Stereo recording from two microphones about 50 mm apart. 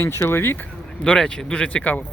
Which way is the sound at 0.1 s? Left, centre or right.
Left.